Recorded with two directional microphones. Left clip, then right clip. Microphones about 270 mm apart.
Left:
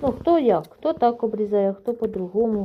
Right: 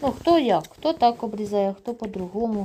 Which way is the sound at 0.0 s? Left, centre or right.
Right.